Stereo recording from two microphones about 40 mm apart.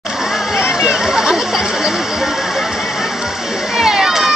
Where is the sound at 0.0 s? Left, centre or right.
Centre.